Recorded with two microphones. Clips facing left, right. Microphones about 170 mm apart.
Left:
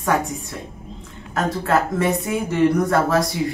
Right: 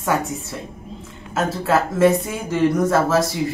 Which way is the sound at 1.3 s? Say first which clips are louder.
Even; centre (ahead or behind).